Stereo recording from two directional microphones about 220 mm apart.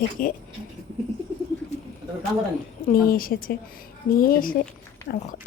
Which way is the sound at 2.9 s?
40° left (ahead or behind).